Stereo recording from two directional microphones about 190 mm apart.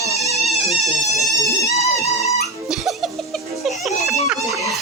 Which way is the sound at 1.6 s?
15° left (ahead or behind).